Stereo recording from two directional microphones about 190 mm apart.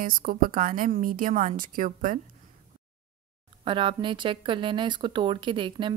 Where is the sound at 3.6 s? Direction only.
25° right (ahead or behind).